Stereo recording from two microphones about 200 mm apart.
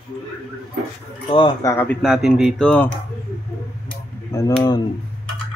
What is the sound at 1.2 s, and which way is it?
Speech, 25° left (ahead or behind).